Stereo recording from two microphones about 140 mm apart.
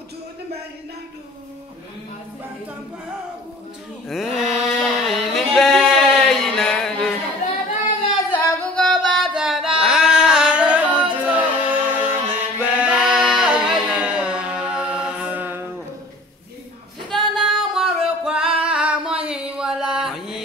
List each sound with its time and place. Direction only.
4.1 s a sound: 5° right (ahead or behind)
7.4 s singing: 60° left (ahead or behind)
8.7 s singing: 5° left (ahead or behind); by 15.6 s 10° right (ahead or behind)
17.4 s music: centre (ahead or behind)